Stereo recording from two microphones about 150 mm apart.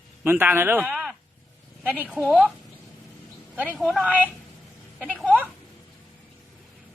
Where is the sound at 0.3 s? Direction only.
15° right (ahead or behind).